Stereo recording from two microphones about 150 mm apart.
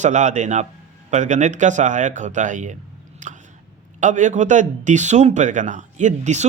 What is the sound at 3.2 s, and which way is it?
Chewing, 55° right (ahead or behind).